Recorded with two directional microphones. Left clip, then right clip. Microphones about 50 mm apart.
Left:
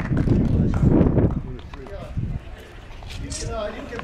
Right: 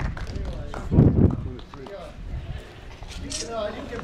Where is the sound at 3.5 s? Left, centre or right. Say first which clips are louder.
Left 1 dB; centre.